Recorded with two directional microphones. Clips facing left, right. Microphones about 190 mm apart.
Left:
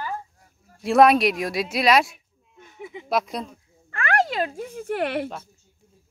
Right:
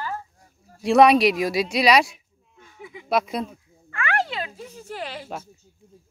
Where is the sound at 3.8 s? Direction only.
35° left (ahead or behind); by 5.2 s 60° left (ahead or behind).